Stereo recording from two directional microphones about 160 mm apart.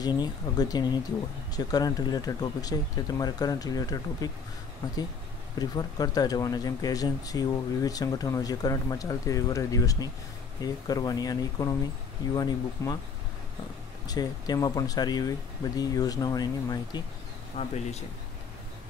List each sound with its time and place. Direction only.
0.0 s speech: 25° left (ahead or behind)
5.6 s speech: 25° left (ahead or behind)
14.0 s speech: 25° left (ahead or behind)
17.6 s speech: 45° left (ahead or behind)